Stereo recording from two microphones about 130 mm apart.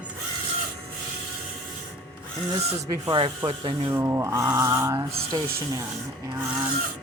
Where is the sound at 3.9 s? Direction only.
20° right (ahead or behind).